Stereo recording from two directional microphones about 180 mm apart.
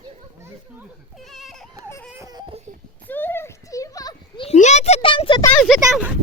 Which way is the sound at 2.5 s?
45° right (ahead or behind).